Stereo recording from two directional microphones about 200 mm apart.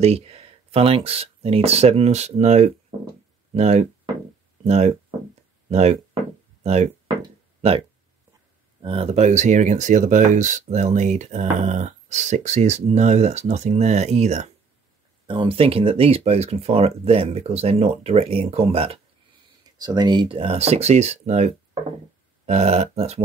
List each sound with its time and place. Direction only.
0.0 s speech: 30° right (ahead or behind)
7.2 s a sound: 30° right (ahead or behind)
8.8 s speech: 30° right (ahead or behind)
22.5 s speech: 35° right (ahead or behind)